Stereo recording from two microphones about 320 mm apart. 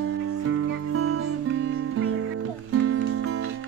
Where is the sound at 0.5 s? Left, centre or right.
Right.